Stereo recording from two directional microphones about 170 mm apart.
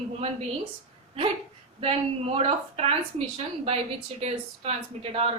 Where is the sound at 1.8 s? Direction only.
35° right (ahead or behind).